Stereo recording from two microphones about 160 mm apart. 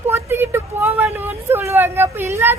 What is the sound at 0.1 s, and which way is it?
A woman's voice, 15° right (ahead or behind).